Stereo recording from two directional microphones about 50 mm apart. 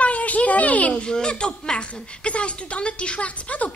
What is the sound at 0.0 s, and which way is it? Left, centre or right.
Speech, left.